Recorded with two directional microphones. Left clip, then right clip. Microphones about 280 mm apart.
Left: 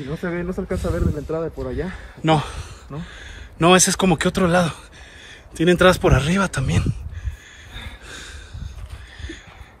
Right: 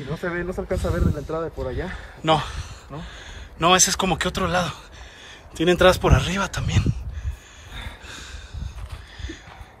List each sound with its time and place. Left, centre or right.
0.2 s speech: right
2.2 s a man's voice: centre
8.1 s a sound: centre